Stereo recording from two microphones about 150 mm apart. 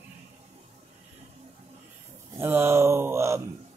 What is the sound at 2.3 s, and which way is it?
Speech, 15° right (ahead or behind).